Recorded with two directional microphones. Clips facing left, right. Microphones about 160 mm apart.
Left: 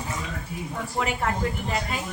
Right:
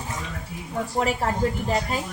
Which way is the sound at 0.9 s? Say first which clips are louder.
Right 2 dB; 35° right (ahead or behind).